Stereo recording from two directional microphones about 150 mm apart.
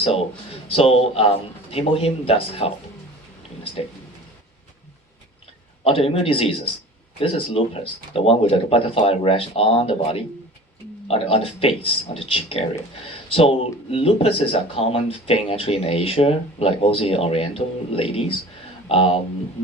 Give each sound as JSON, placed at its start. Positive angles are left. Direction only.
{"t": 0.0, "sound": "speech", "side_deg": 40}
{"t": 5.8, "sound": "speech", "side_deg": 40}